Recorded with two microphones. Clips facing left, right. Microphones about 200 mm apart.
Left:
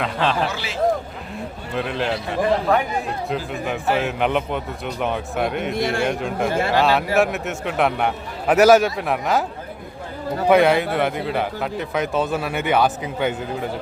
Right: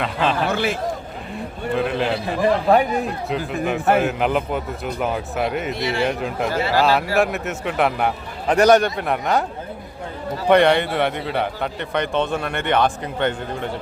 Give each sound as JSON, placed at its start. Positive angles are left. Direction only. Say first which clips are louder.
{"t": 0.0, "sound": "a man's voice", "louder": "right 1 dB", "side_deg": 0}
{"t": 0.4, "sound": "a man's voice", "louder": "right 5 dB", "side_deg": -55}
{"t": 1.7, "sound": "a man's voice", "louder": "right 3 dB", "side_deg": 0}
{"t": 2.4, "sound": "a man's voice", "louder": "right 3 dB", "side_deg": -30}
{"t": 3.2, "sound": "a man's voice", "louder": "right 2 dB", "side_deg": 0}
{"t": 5.7, "sound": "a man's voice", "louder": "left 1 dB", "side_deg": 50}
{"t": 6.1, "sound": "a man's voice", "louder": "left 1 dB", "side_deg": 0}
{"t": 10.5, "sound": "a man's voice", "louder": "right 1 dB", "side_deg": 5}